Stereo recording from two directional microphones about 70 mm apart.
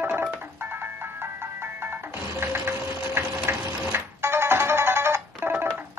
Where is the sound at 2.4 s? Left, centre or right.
Right.